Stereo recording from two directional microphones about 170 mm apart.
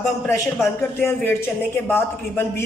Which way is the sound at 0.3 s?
15° left (ahead or behind).